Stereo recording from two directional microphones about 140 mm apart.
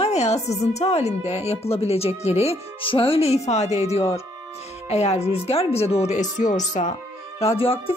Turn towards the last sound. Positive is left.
turn(degrees=40)  # may be behind; listen again after turning